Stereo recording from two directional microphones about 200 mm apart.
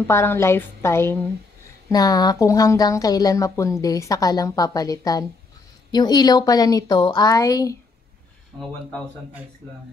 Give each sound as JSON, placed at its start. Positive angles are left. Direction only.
{"t": 0.0, "sound": "a woman's voice", "side_deg": 10}